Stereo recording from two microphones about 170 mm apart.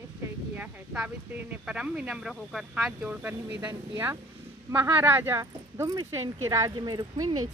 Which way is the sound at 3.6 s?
20° right (ahead or behind).